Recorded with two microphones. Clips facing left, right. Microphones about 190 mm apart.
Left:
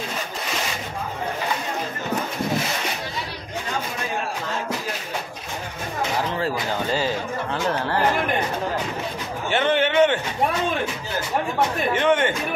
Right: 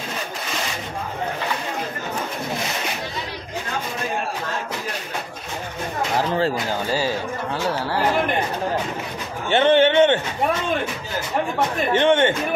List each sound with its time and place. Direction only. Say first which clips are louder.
7.7 s speech: even; 10° right (ahead or behind)
9.5 s a man's voice: right 5 dB; 25° right (ahead or behind)
11.9 s a man's voice: right 5 dB; 25° right (ahead or behind)